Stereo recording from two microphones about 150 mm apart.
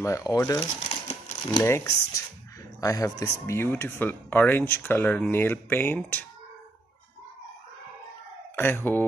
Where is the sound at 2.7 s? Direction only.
25° left (ahead or behind).